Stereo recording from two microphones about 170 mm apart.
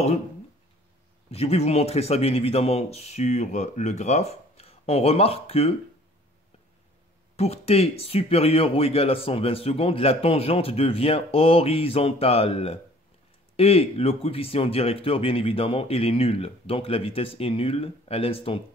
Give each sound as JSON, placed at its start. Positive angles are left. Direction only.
{"t": 1.3, "sound": "speech", "side_deg": 40}
{"t": 7.3, "sound": "speech", "side_deg": 40}